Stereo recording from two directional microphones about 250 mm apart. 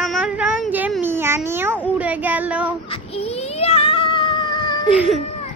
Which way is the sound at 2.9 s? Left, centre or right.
Left.